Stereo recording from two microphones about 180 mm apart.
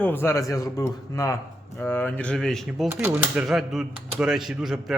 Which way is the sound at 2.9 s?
15° right (ahead or behind).